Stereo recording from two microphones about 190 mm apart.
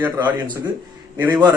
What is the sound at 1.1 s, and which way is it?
Speech, 10° right (ahead or behind).